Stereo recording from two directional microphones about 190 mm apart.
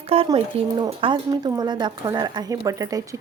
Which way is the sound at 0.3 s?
25° right (ahead or behind).